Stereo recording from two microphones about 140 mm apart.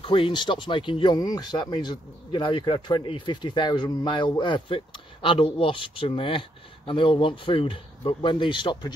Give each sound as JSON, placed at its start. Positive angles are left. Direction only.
{"t": 0.0, "sound": "speech", "side_deg": 40}